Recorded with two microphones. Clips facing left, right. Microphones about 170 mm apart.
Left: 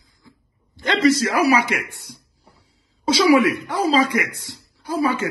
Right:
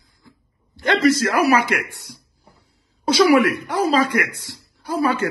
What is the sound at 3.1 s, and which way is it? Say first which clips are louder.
A man's voice: right 1 dB; 55° right (ahead or behind).